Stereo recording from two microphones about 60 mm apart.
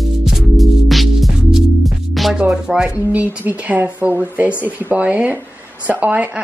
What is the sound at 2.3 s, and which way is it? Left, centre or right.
Music, centre.